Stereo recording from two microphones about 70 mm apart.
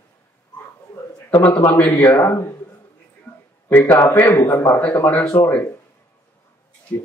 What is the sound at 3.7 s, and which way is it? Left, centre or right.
A man's voice, left.